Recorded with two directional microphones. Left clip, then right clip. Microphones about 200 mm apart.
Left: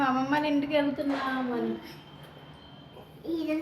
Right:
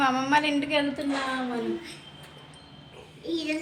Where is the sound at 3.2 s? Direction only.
10° left (ahead or behind).